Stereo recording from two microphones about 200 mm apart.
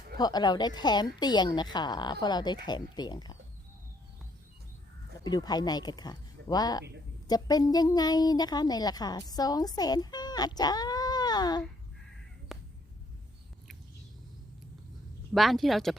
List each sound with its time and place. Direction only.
0.2 s a woman's voice: 20° left (ahead or behind)
5.2 s a woman's voice: 20° left (ahead or behind)
12.5 s a sound: centre (ahead or behind)
15.3 s speech: centre (ahead or behind)